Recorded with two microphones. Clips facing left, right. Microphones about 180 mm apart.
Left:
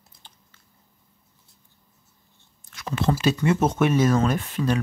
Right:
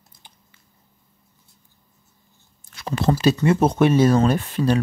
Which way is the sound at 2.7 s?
35° right (ahead or behind).